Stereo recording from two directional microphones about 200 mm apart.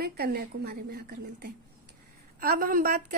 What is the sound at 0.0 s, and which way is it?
A woman's voice, 50° right (ahead or behind).